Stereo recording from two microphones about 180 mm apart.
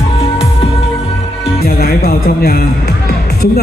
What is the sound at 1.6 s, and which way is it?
Speech, 60° left (ahead or behind).